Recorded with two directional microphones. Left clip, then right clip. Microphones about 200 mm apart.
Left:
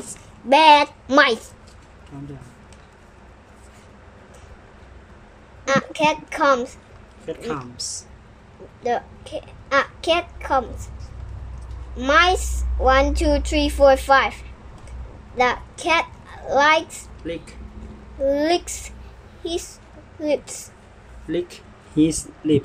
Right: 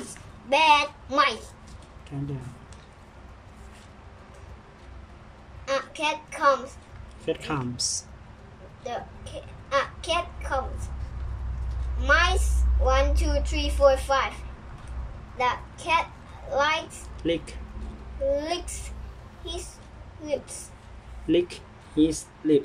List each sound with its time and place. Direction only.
0.5 s a woman's voice: 40° left (ahead or behind)
5.7 s a woman's voice: 45° left (ahead or behind)
7.2 s speech: 10° right (ahead or behind)
8.8 s a child's voice: 45° left (ahead or behind)
12.0 s a woman's voice: 45° left (ahead or behind)
15.3 s a child's voice: 45° left (ahead or behind)
17.2 s speech: 10° right (ahead or behind)
18.3 s a woman's voice: 45° left (ahead or behind)
21.3 s speech: 5° right (ahead or behind)